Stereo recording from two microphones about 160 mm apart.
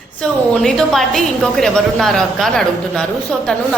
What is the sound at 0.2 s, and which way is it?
A woman's voice, 5° left (ahead or behind).